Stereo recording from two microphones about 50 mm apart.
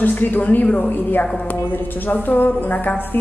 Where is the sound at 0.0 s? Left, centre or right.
Left.